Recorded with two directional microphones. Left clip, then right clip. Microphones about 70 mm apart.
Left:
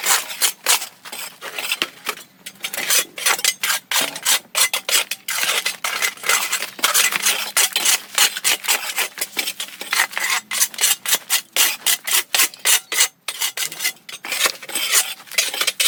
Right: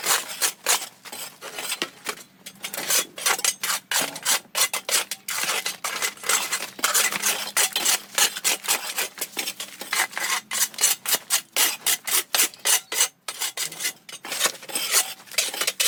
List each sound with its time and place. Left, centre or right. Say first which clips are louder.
0.0 s a sound: left 5 dB; left
2.6 s filing: left 5 dB; left
14.3 s cutlery: left 5 dB; left